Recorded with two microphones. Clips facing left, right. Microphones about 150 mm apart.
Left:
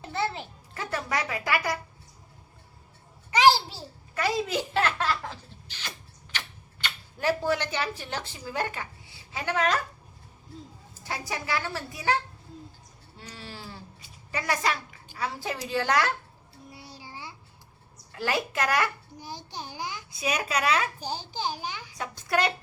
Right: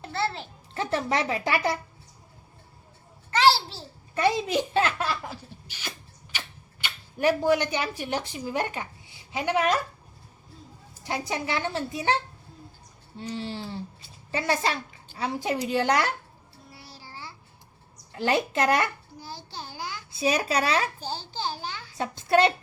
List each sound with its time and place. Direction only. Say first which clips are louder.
0.1 s a sound: right 1 dB; 15° left (ahead or behind)
0.7 s a woman's voice: right 5 dB; 25° right (ahead or behind)
3.3 s a child's voice: left 1 dB; 15° left (ahead or behind)
4.1 s a woman's voice: right 4 dB; 25° right (ahead or behind)
4.9 s laughter: left 1 dB; 10° right (ahead or behind)
6.3 s speech: left 1 dB; 10° right (ahead or behind)
11.0 s a woman's voice: right 4 dB; 20° right (ahead or behind)
16.7 s child singing: left 1 dB; 20° left (ahead or behind)
18.1 s a woman's voice: right 4 dB; 25° right (ahead or behind)
19.2 s babbling: left 1 dB; 15° left (ahead or behind)
20.1 s speech: right 4 dB; 30° right (ahead or behind)
21.0 s a child's voice: even; 15° left (ahead or behind)
21.9 s a woman's voice: right 6 dB; 25° right (ahead or behind)